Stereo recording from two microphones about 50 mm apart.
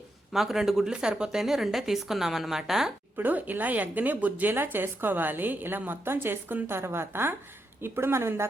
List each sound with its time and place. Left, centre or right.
0.3 s a woman's voice: centre
3.2 s a woman's voice: right